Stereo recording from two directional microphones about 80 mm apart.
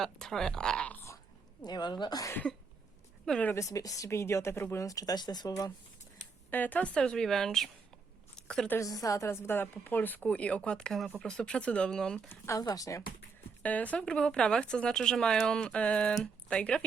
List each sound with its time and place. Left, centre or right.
0.0 s speech: centre
1.6 s a woman's voice: left
3.2 s speech: centre
3.5 s speech: left
4.8 s speech: left
6.5 s speech: left; by 7.7 s centre
8.4 s a sound: centre
8.8 s a woman's voice: left; by 12.3 s centre
12.5 s speech: left
13.6 s speech: centre